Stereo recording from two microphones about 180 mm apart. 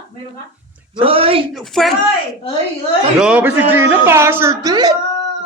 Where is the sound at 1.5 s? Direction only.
Centre (ahead or behind).